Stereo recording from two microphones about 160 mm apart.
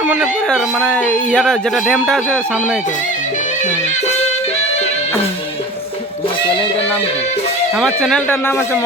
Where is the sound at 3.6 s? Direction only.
50° left (ahead or behind).